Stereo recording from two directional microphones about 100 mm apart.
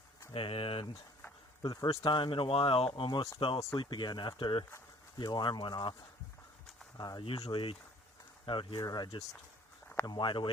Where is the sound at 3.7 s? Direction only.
50° left (ahead or behind).